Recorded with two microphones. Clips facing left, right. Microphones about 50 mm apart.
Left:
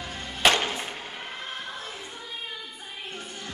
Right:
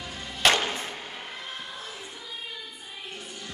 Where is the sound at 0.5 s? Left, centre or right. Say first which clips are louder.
Even; left.